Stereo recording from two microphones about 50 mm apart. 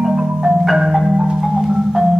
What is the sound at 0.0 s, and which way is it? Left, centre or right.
Marimba, centre.